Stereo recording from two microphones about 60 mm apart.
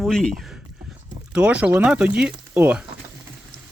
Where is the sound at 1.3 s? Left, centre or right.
Centre.